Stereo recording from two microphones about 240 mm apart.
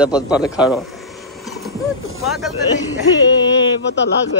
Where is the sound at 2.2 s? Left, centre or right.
Centre.